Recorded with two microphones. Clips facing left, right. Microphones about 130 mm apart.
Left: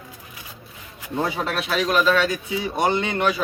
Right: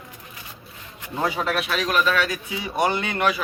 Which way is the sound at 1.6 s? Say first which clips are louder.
Left 6 dB; 25° left (ahead or behind).